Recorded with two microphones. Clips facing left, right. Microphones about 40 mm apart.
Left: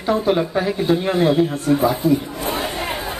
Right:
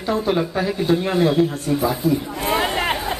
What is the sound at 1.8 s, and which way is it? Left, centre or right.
Speech, centre.